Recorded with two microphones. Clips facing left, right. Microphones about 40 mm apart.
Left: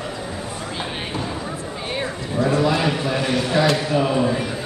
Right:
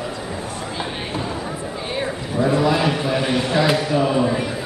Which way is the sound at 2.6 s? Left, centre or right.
Centre.